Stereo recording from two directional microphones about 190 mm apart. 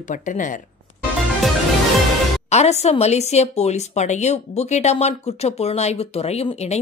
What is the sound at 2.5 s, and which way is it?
A woman's voice, 35° left (ahead or behind).